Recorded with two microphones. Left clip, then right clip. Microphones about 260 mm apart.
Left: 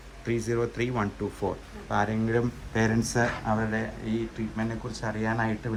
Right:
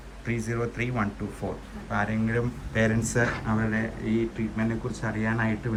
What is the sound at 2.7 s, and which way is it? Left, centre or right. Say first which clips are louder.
Speech: right 1 dB; centre.